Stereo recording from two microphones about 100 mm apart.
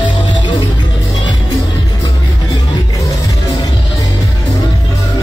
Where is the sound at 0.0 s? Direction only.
50° left (ahead or behind).